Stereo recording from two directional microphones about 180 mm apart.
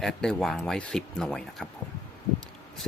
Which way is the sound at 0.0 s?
5° left (ahead or behind).